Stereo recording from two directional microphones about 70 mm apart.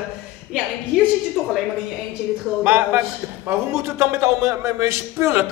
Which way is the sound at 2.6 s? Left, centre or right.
Right.